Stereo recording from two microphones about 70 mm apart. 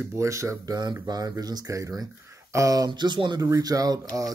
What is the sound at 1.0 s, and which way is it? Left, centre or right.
Speech, right.